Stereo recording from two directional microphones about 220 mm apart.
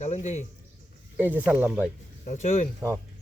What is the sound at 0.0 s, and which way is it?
Speech, 30° left (ahead or behind).